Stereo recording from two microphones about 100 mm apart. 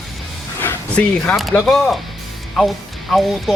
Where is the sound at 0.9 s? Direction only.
10° left (ahead or behind).